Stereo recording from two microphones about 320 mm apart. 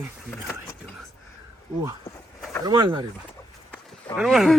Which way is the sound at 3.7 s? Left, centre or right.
Centre.